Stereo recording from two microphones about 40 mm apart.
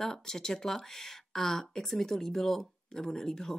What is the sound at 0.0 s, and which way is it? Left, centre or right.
Speech, centre.